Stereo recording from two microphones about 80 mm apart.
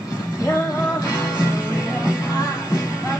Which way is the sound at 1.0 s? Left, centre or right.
Left.